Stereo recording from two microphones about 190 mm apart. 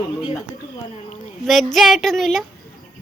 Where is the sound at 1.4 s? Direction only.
Centre (ahead or behind).